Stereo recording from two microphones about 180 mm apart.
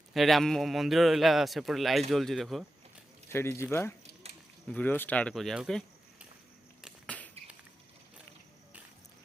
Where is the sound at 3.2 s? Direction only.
15° left (ahead or behind); by 6.2 s centre (ahead or behind).